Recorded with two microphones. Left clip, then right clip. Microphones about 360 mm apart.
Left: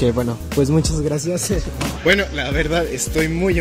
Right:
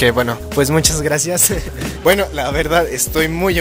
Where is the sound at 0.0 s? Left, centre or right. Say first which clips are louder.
Right 5 dB; right.